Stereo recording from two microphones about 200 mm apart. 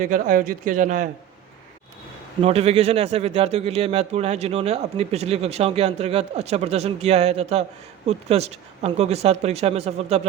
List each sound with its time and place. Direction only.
0.0 s a man's voice: 45° right (ahead or behind)
2.4 s a man's voice: 30° right (ahead or behind)